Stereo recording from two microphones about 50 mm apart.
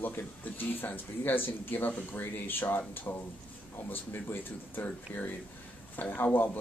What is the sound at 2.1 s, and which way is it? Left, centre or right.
Speech, left.